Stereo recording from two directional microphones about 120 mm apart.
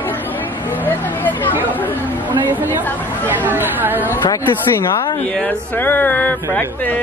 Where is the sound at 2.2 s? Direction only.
15° right (ahead or behind).